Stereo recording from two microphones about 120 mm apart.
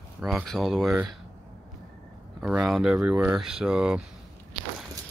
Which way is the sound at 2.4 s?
5° right (ahead or behind).